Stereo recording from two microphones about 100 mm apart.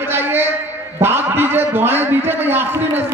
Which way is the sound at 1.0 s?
25° right (ahead or behind).